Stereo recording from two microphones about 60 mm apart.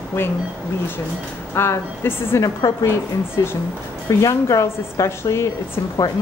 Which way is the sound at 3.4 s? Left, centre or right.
Left.